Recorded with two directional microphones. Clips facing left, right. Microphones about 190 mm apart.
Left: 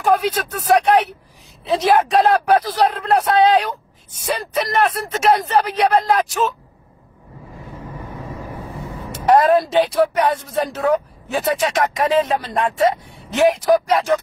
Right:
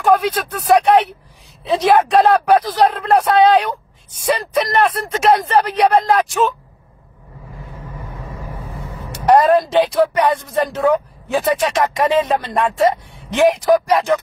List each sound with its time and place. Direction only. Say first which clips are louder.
0.0 s speech: right 2 dB; 5° left (ahead or behind)
4.7 s speech: right 2 dB; centre (ahead or behind)
9.3 s speech: right 2 dB; centre (ahead or behind)